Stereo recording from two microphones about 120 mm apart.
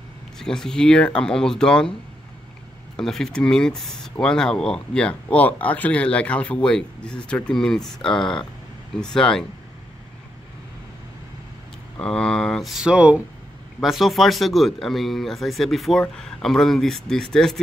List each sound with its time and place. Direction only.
0.4 s speech: 5° left (ahead or behind)
3.0 s speech: 5° left (ahead or behind)
12.0 s speech: 5° left (ahead or behind)